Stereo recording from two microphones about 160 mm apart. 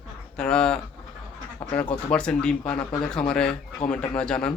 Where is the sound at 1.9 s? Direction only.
5° left (ahead or behind).